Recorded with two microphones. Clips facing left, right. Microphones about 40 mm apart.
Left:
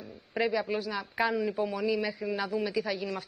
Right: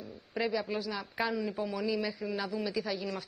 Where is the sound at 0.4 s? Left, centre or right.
Centre.